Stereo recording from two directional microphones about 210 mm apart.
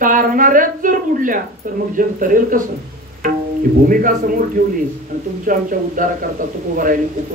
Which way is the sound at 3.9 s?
40° right (ahead or behind).